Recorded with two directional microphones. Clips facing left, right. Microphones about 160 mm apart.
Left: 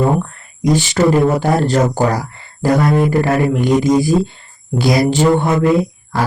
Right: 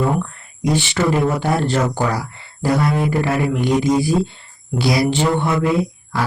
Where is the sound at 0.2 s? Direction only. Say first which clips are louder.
Left 3 dB; 40° left (ahead or behind).